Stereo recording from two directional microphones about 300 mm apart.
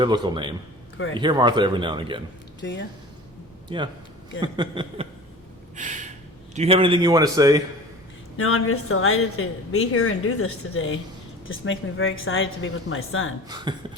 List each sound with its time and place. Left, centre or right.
0.0 s a man's voice: centre
2.6 s speech: left
3.7 s a man's voice: centre
5.7 s a sound: right
6.6 s a man's voice: centre
8.4 s a woman's voice: left
13.5 s a man's voice: centre